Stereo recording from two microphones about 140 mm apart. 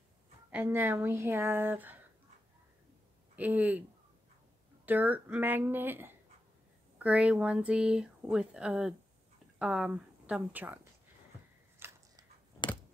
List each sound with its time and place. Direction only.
0.5 s speech: 10° right (ahead or behind)
3.3 s speech: 10° right (ahead or behind)
4.8 s speech: 10° right (ahead or behind)
11.8 s a sound: 15° right (ahead or behind)